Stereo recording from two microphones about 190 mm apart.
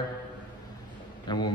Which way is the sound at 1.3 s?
25° left (ahead or behind).